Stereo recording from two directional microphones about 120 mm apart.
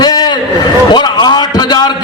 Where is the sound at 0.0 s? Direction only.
35° left (ahead or behind).